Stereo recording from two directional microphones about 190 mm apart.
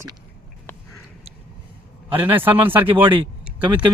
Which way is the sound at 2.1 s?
10° right (ahead or behind).